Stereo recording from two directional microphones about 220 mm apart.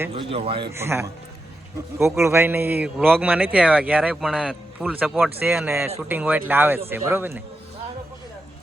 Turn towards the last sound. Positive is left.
turn(degrees=-10)  # may be behind; listen again after turning